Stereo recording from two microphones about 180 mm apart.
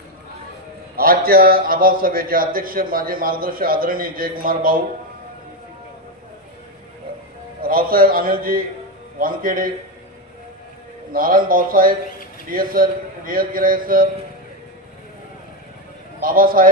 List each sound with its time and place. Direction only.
0.9 s a man's voice: 55° right (ahead or behind)
7.6 s a man's voice: 55° right (ahead or behind)
11.1 s a man's voice: 50° right (ahead or behind)
16.2 s a man's voice: 50° right (ahead or behind)